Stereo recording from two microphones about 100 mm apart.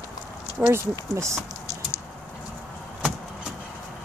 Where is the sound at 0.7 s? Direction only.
30° right (ahead or behind).